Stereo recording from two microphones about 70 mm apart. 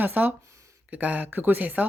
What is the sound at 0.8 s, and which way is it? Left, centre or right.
Speech, right.